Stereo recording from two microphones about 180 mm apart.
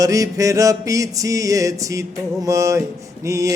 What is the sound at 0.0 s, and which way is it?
Mantra, 20° right (ahead or behind).